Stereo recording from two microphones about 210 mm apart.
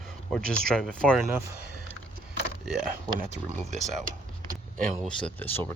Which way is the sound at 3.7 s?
40° right (ahead or behind).